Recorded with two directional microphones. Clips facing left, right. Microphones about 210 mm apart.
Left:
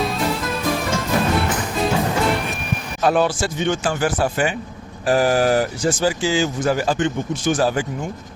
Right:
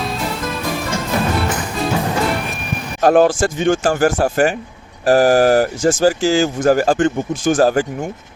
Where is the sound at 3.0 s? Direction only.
45° right (ahead or behind).